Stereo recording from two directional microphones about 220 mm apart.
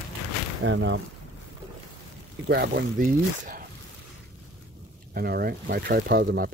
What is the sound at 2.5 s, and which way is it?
Speech, 45° right (ahead or behind).